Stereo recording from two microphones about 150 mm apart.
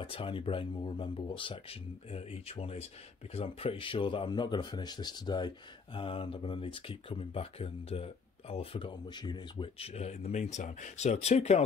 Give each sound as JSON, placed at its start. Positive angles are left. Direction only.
{"t": 0.0, "sound": "speech", "side_deg": 35}